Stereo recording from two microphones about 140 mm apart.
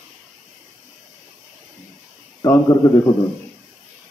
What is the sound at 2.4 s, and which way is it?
Speech, 20° left (ahead or behind).